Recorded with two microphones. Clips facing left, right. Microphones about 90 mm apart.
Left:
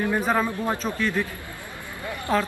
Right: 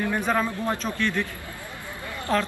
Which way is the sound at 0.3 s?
10° left (ahead or behind).